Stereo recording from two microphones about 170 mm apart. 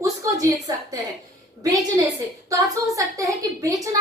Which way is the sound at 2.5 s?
20° right (ahead or behind).